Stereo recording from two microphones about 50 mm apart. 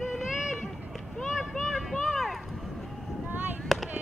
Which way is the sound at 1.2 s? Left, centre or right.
Centre.